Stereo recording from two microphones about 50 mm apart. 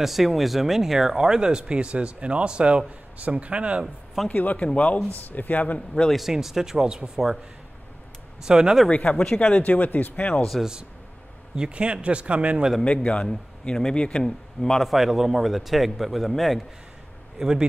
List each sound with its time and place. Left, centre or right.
0.0 s speech: centre; by 3.8 s right
3.8 s speech: centre
4.3 s speech: left
4.7 s speech: left
6.1 s speech: centre
8.5 s speech: centre
8.8 s speech: left
11.5 s speech: right
12.8 s speech: left
13.3 s speech: centre
13.9 s a man's voice: centre
14.8 s a man's voice: centre
17.4 s speech: centre